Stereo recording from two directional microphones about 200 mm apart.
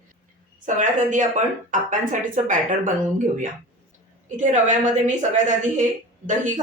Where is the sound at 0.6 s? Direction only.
40° right (ahead or behind).